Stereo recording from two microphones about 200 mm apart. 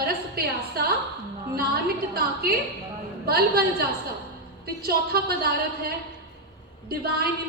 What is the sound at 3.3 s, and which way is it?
Speech, 50° right (ahead or behind).